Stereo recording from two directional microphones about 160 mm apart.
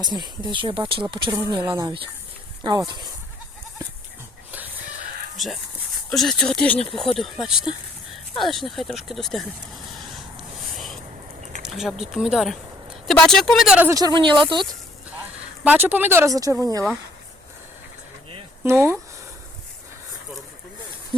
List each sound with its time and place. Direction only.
0.0 s speech: 25° right (ahead or behind)
1.6 s speech: 15° right (ahead or behind)
2.6 s speech: 25° right (ahead or behind)
6.1 s speech: centre (ahead or behind)
11.6 s speech: centre (ahead or behind)
13.8 s speech: 20° right (ahead or behind)
15.6 s speech: 10° right (ahead or behind)
18.6 s speech: 15° right (ahead or behind)